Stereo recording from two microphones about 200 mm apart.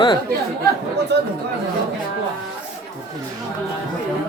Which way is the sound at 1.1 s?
60° right (ahead or behind).